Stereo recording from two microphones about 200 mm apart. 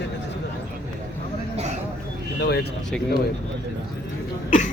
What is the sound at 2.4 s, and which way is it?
Speech, 55° left (ahead or behind).